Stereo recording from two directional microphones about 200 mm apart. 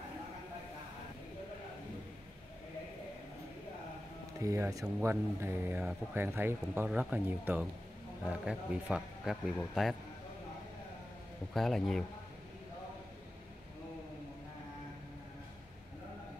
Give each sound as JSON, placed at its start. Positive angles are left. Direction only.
{"t": 4.4, "sound": "speech", "side_deg": -15}
{"t": 11.5, "sound": "speech", "side_deg": 0}